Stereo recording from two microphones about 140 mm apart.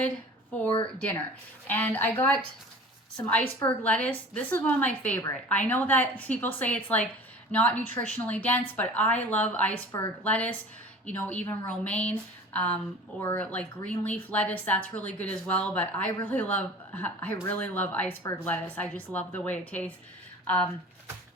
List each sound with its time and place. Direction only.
1.6 s a woman's voice: 10° left (ahead or behind)
9.9 s a woman's voice: 25° left (ahead or behind)
10.2 s a woman's voice: 10° left (ahead or behind)